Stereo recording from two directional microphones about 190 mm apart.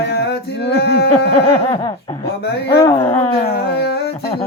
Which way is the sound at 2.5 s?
60° left (ahead or behind).